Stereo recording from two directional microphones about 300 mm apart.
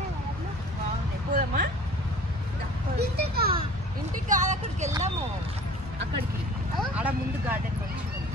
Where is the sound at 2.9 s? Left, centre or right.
Right.